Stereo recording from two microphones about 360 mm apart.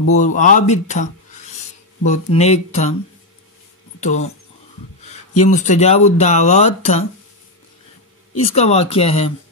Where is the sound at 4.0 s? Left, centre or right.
Centre.